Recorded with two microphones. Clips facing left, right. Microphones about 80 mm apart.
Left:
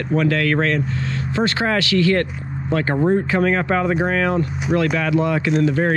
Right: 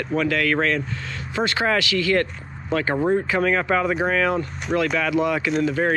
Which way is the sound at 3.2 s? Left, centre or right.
Left.